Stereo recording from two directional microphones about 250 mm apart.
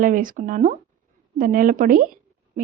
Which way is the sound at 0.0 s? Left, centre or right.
Right.